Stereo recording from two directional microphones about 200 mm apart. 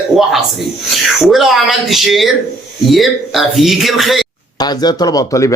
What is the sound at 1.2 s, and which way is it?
Speech, centre (ahead or behind).